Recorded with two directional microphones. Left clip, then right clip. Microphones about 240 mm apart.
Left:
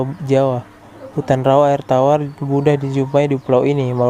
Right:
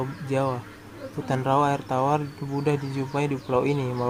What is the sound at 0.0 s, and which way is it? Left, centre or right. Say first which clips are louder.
Speech: left 11 dB; left.